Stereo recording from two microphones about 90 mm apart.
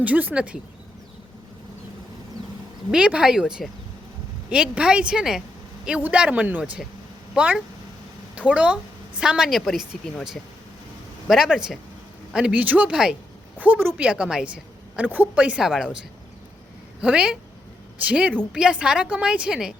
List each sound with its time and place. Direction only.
0.0 s a woman's voice: 20° right (ahead or behind)
2.9 s a woman's voice: 10° right (ahead or behind)
11.3 s a woman's voice: 5° right (ahead or behind)
13.6 s a woman's voice: 20° right (ahead or behind)
17.0 s a woman's voice: 10° right (ahead or behind)